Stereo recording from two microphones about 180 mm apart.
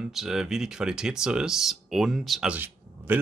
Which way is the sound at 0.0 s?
5° right (ahead or behind).